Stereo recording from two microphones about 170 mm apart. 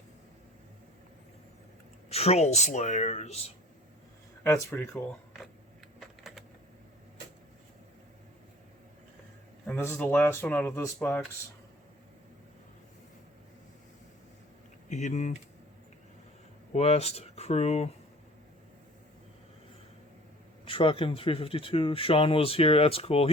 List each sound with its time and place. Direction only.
2.0 s speech: 35° left (ahead or behind)
4.4 s speech: 15° left (ahead or behind)
6.0 s typing: centre (ahead or behind)
9.9 s speech: 10° left (ahead or behind)
14.8 s speech: 45° left (ahead or behind)
16.7 s speech: 40° left (ahead or behind)
20.7 s speech: 30° left (ahead or behind)